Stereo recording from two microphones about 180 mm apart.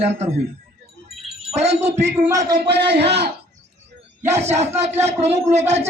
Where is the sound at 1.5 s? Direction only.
35° right (ahead or behind).